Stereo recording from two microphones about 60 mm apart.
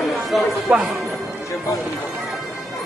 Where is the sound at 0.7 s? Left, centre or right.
Right.